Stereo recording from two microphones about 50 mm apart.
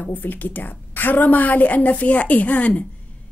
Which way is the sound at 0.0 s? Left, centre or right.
Left.